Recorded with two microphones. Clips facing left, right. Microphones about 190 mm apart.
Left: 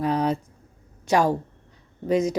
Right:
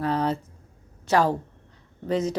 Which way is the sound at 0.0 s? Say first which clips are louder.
Left 2 dB; 15° left (ahead or behind).